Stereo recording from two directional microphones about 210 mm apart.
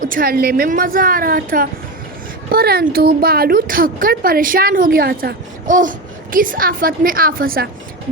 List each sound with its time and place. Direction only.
0.0 s a woman's voice: 40° right (ahead or behind)